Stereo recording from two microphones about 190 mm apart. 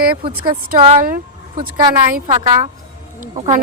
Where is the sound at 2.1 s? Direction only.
40° right (ahead or behind).